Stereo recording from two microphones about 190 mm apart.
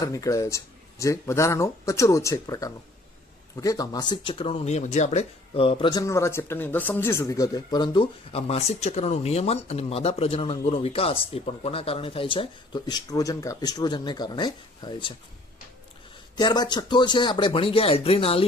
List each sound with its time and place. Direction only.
0.0 s speech: 15° left (ahead or behind)
16.4 s speech: 25° left (ahead or behind)